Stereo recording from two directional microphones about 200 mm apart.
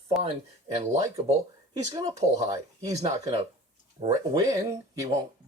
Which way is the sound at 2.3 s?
15° right (ahead or behind).